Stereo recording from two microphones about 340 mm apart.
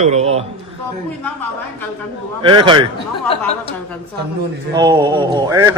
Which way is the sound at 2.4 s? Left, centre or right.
Centre.